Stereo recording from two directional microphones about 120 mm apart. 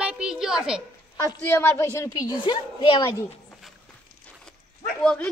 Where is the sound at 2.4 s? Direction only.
45° left (ahead or behind).